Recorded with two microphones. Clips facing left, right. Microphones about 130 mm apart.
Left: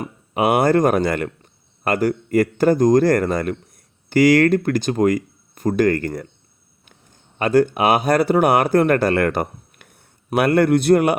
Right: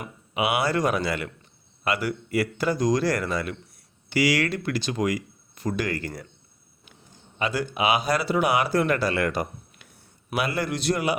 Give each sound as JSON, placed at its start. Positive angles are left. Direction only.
{"t": 0.0, "sound": "speech", "side_deg": 50}
{"t": 7.3, "sound": "a man's voice", "side_deg": 50}